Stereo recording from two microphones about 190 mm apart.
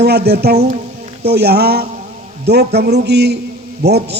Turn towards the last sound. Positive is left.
turn(degrees=-60)  # may be behind; listen again after turning